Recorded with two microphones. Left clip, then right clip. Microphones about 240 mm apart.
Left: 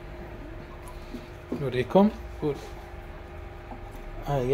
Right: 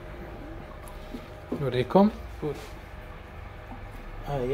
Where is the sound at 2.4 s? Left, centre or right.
Left.